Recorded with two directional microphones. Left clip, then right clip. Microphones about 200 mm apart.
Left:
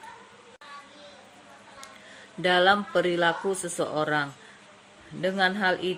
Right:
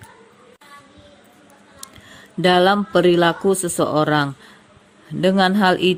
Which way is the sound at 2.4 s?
45° right (ahead or behind).